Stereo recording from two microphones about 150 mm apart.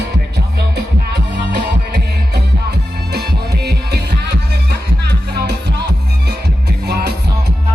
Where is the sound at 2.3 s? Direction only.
90° right.